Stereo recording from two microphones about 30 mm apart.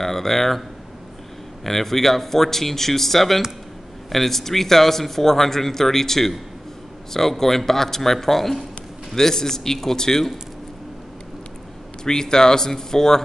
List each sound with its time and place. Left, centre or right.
0.0 s speech: centre
12.0 s speech: left